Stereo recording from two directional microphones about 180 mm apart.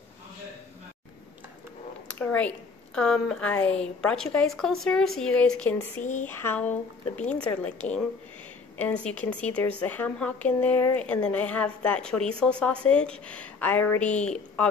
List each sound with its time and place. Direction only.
2.0 s a woman's voice: 10° left (ahead or behind)